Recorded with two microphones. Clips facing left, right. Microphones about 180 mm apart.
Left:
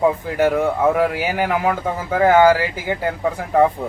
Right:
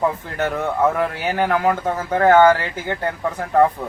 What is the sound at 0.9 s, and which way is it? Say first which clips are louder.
Speech: left 2 dB; 10° left (ahead or behind).